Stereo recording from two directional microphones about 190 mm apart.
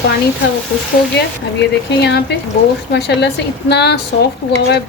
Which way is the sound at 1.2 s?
60° left (ahead or behind).